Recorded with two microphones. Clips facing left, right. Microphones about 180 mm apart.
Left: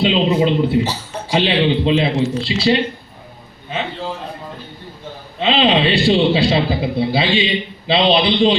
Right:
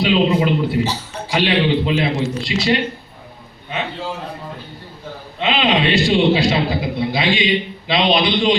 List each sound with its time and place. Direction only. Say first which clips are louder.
0.0 s speech: left 1 dB; 25° left (ahead or behind)
5.4 s a man's voice: left 3 dB; 30° left (ahead or behind)